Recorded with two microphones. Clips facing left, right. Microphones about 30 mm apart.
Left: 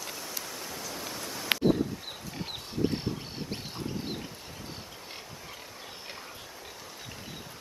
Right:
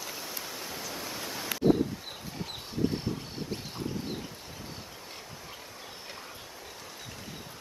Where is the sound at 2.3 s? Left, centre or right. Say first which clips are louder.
Even; left.